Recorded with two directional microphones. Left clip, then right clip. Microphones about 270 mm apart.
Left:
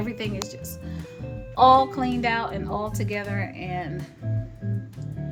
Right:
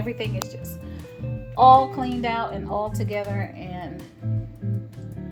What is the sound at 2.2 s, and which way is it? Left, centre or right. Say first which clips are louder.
Speech: even; centre.